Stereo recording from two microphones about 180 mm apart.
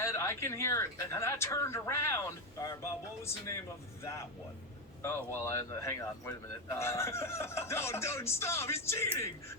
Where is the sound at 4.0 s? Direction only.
15° left (ahead or behind).